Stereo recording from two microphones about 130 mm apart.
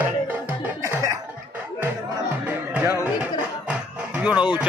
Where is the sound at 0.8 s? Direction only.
25° right (ahead or behind).